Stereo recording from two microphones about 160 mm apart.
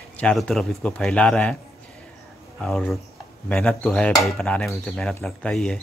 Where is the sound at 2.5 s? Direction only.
5° left (ahead or behind).